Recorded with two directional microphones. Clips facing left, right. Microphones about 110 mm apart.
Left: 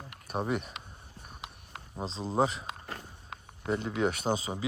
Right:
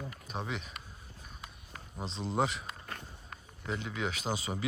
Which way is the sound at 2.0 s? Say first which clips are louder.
Left 3 dB; 35° left (ahead or behind).